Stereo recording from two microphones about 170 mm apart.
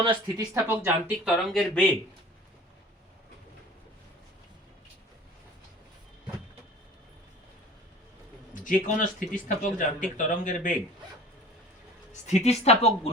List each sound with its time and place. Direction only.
0.0 s speech: 30° right (ahead or behind)
0.5 s speech: 15° right (ahead or behind)
8.6 s speech: 50° left (ahead or behind)
12.2 s a woman's voice: 40° left (ahead or behind)